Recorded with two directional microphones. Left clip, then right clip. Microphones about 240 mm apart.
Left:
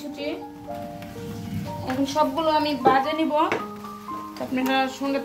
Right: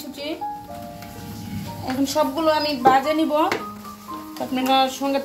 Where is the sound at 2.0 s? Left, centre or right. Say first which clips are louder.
Right 2 dB; right.